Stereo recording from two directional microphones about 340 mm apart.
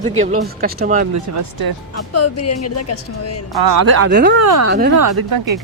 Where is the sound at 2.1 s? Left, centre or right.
Left.